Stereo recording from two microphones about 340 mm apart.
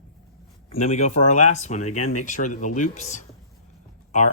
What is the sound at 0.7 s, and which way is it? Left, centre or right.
Speech, centre.